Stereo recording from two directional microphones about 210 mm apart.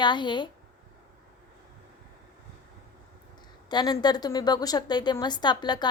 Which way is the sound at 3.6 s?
20° left (ahead or behind).